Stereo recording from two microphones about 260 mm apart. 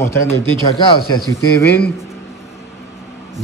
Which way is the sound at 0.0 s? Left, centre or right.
Centre.